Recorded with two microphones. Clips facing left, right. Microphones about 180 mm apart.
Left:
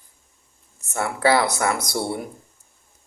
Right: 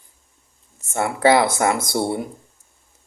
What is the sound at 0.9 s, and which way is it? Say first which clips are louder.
A man's voice: right 3 dB; 20° right (ahead or behind).